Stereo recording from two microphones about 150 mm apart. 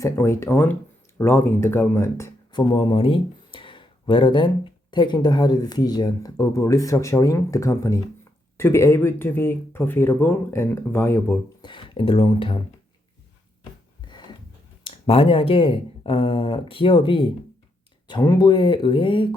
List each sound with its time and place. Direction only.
0.0 s speech: 20° left (ahead or behind)
2.5 s speech: 30° left (ahead or behind); by 11.3 s 15° left (ahead or behind)
11.6 s speech: 35° left (ahead or behind)
14.1 s a sound: 30° left (ahead or behind)
14.8 s speech: 40° left (ahead or behind)